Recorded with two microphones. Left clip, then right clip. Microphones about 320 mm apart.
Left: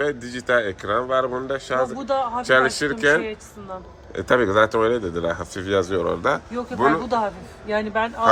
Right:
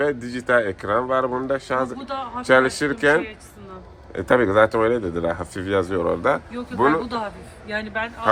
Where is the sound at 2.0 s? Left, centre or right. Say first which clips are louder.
Left 7 dB; centre.